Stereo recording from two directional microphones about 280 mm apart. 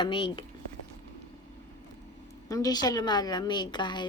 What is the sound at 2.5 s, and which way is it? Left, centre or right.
A woman's voice, centre.